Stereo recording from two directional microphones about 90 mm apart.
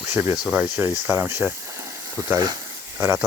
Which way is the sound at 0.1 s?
25° right (ahead or behind).